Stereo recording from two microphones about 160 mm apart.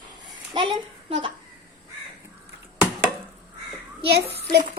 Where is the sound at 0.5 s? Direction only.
30° right (ahead or behind).